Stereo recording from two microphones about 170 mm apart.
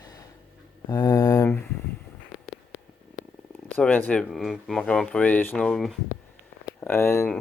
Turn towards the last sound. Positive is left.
turn(degrees=15)  # may be behind; listen again after turning